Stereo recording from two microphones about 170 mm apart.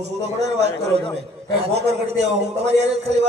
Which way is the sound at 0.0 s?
40° right (ahead or behind).